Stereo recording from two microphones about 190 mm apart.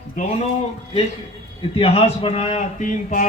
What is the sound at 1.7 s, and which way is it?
A man's voice, 30° left (ahead or behind).